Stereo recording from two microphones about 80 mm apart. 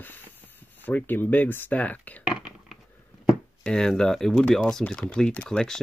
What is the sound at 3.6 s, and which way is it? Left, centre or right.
Speech, centre.